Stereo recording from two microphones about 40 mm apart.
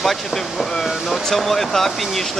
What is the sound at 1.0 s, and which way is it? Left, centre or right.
Speech, centre.